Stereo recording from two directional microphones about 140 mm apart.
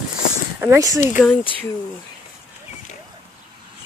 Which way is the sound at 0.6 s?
20° right (ahead or behind).